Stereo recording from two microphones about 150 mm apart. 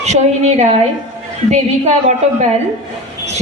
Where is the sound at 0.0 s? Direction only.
50° right (ahead or behind).